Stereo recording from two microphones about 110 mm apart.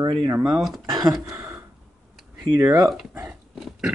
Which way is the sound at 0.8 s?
40° right (ahead or behind).